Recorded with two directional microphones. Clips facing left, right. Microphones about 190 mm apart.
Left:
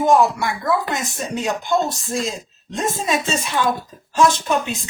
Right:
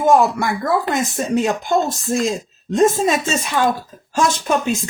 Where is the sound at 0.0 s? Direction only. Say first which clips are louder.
Right 1 dB; 50° right (ahead or behind).